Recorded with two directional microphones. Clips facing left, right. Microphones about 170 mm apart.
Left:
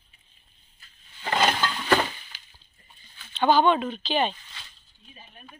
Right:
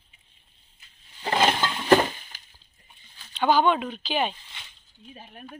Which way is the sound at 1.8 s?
35° right (ahead or behind).